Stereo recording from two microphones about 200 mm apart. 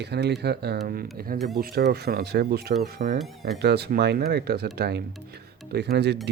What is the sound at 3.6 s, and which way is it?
Speech, 55° right (ahead or behind).